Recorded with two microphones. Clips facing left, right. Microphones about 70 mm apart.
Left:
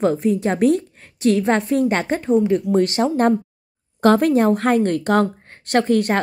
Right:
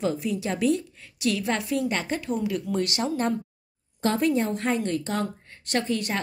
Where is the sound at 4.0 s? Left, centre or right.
Left.